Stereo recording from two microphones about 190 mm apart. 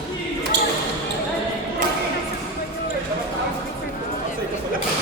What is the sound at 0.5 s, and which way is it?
Basketball bounce, 60° right (ahead or behind).